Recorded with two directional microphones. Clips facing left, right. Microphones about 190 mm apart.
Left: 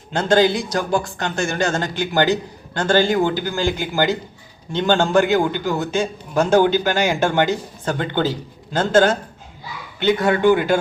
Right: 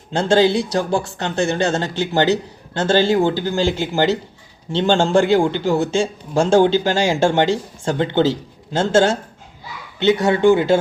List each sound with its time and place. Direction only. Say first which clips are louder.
0.1 s a man's voice: right 1 dB; 30° right (ahead or behind)